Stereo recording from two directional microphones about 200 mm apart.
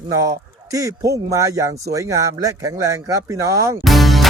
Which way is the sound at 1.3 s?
15° right (ahead or behind).